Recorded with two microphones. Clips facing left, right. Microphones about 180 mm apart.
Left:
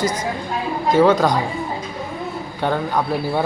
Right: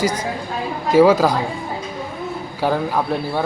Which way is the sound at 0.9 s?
10° right (ahead or behind).